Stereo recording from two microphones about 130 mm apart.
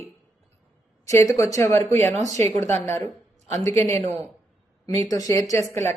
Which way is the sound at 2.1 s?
60° right (ahead or behind).